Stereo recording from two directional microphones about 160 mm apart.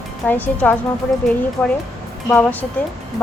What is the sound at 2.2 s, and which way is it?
Speech, 10° left (ahead or behind).